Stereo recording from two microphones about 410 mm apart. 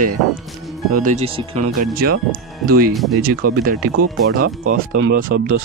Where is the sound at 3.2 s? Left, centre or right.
Right.